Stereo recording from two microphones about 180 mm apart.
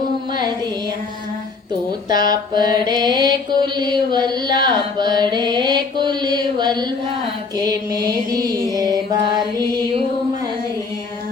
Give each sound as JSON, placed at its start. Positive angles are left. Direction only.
{"t": 2.0, "sound": "mantra", "side_deg": -20}
{"t": 7.5, "sound": "music", "side_deg": -20}